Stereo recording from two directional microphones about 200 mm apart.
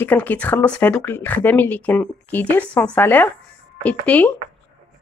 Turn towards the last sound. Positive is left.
turn(degrees=5)  # may be behind; listen again after turning